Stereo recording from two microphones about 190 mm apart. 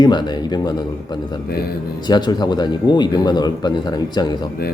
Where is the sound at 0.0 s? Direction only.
20° left (ahead or behind).